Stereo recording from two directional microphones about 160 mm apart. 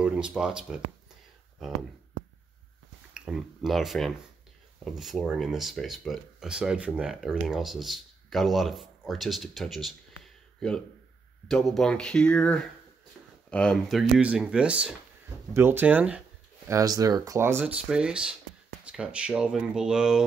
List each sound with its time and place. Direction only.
0.0 s speech: 5° right (ahead or behind)
3.2 s speech: 5° right (ahead or behind)
16.6 s speech: 20° right (ahead or behind); by 20.2 s 5° right (ahead or behind)